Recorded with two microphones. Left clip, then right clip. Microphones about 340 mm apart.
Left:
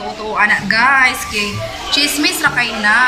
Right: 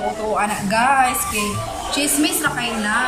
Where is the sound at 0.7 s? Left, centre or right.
Centre.